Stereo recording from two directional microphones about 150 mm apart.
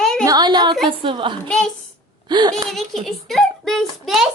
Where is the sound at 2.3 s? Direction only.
30° right (ahead or behind).